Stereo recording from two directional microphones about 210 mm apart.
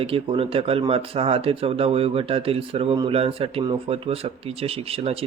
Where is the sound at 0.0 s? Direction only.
25° right (ahead or behind).